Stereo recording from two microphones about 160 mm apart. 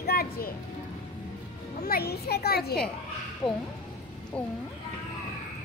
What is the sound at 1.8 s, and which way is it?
Speech, 75° left (ahead or behind).